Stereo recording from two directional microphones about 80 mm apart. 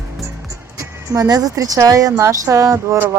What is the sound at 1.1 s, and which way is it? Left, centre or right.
A woman's voice, right.